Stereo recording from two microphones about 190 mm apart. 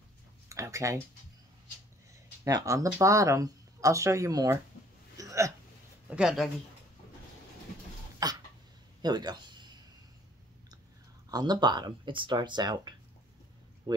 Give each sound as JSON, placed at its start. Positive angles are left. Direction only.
{"t": 0.5, "sound": "speech", "side_deg": -15}
{"t": 2.4, "sound": "speech", "side_deg": -20}
{"t": 5.1, "sound": "hiccup", "side_deg": -15}
{"t": 6.0, "sound": "speech", "side_deg": -5}
{"t": 8.2, "sound": "cough", "side_deg": -20}
{"t": 9.0, "sound": "speech", "side_deg": -20}
{"t": 11.2, "sound": "speech", "side_deg": -20}